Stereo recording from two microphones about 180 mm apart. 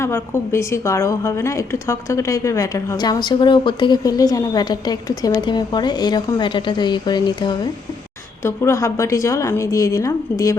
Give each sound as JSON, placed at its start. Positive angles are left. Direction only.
{"t": 0.0, "sound": "a woman's voice", "side_deg": 15}